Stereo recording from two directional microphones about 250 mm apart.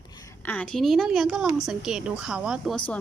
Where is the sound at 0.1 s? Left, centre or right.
Centre.